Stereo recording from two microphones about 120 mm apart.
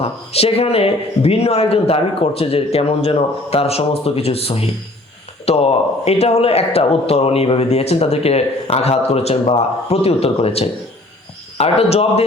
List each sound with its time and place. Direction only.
0.0 s speech: 55° left (ahead or behind)